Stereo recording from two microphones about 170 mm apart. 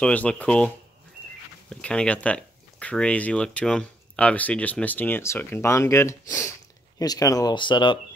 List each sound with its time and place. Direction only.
0.0 s speech: 5° left (ahead or behind)
1.7 s speech: 5° left (ahead or behind); by 8.0 s 30° left (ahead or behind)